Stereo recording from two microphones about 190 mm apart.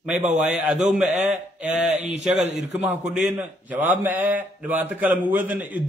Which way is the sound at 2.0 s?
40° right (ahead or behind).